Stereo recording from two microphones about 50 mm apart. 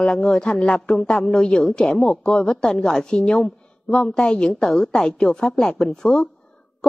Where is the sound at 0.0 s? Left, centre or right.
Centre.